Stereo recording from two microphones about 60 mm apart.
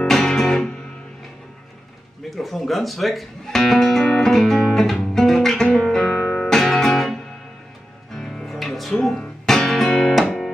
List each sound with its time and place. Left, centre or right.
0.0 s music: centre
2.3 s music: centre
9.1 s music: centre
9.6 s music: centre